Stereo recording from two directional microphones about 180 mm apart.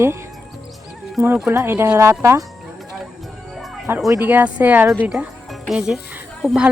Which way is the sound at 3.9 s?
10° right (ahead or behind).